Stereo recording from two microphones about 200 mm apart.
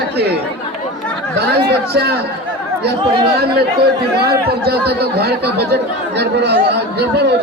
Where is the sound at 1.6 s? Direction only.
50° right (ahead or behind).